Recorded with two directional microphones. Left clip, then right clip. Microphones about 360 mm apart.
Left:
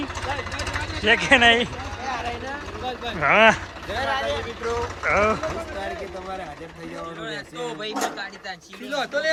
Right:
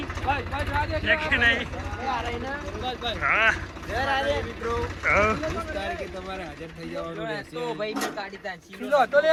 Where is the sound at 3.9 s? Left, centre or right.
Right.